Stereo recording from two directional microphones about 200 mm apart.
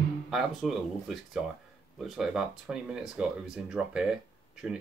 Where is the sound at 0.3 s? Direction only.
Centre (ahead or behind).